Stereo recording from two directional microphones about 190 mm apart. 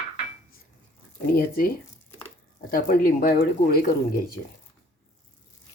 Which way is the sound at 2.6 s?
50° left (ahead or behind).